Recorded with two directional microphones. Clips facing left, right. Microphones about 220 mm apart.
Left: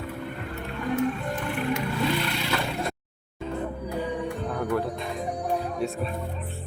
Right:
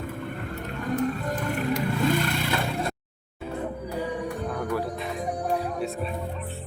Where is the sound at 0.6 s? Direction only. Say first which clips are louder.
Left 1 dB; 40° right (ahead or behind).